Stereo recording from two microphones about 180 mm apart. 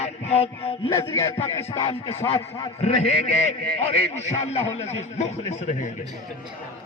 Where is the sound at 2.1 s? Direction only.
30° left (ahead or behind).